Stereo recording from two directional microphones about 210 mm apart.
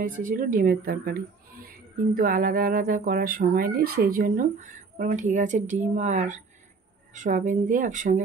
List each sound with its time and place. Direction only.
0.2 s speech: 40° right (ahead or behind)
2.1 s speech: 40° right (ahead or behind)